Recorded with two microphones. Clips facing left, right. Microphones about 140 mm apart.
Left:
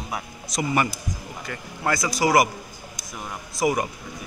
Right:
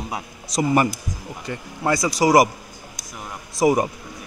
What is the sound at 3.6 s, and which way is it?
Speech, 30° right (ahead or behind).